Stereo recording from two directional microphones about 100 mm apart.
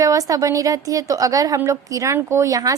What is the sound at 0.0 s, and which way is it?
A woman's voice, 35° right (ahead or behind).